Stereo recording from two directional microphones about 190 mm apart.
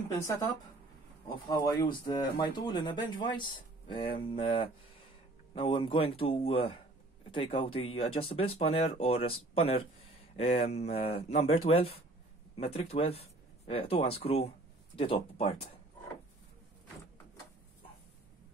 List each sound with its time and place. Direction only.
0.1 s speech: 15° left (ahead or behind)
1.5 s speech: 20° left (ahead or behind)